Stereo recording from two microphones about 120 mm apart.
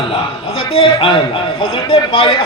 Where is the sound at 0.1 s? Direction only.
50° left (ahead or behind).